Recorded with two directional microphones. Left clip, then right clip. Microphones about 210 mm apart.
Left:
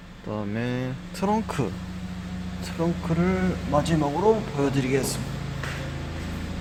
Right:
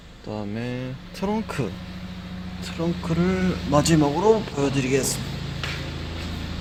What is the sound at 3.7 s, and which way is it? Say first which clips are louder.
Speech: right 4 dB; 20° right (ahead or behind).